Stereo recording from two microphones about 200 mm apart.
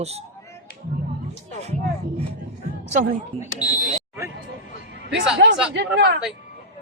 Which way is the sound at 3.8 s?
15° right (ahead or behind).